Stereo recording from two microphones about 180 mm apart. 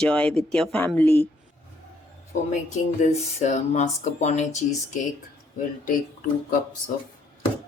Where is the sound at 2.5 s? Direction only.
40° left (ahead or behind).